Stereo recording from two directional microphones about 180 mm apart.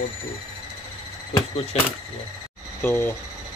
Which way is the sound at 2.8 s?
10° left (ahead or behind).